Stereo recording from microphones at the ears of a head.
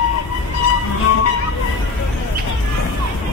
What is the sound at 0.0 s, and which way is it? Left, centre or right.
Music, left.